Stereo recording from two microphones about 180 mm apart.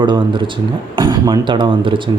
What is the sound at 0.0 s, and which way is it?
Speech, 25° right (ahead or behind).